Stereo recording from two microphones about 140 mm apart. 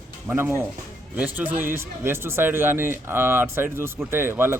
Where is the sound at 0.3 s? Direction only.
15° right (ahead or behind).